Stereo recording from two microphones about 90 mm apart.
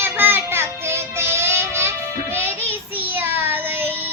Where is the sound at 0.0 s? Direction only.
25° right (ahead or behind).